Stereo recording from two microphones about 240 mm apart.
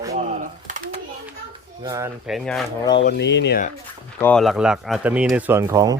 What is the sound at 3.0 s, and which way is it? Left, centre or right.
Speech, left.